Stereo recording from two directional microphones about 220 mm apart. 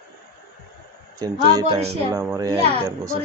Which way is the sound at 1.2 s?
15° right (ahead or behind).